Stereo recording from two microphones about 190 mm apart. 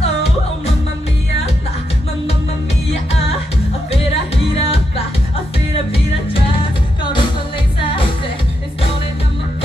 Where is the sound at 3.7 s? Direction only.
30° left (ahead or behind).